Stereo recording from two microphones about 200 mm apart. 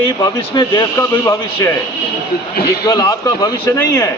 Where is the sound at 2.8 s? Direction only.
15° left (ahead or behind).